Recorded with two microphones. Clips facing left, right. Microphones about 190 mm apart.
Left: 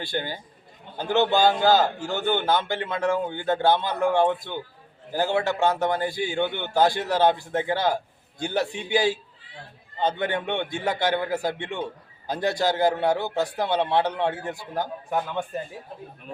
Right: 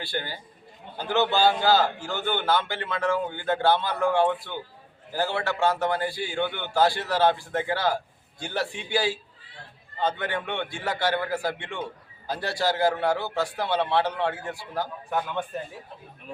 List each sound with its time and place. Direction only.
0.0 s a man's voice: 20° left (ahead or behind)